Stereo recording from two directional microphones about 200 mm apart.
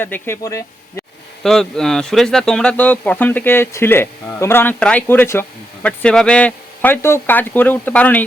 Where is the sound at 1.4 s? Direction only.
5° left (ahead or behind).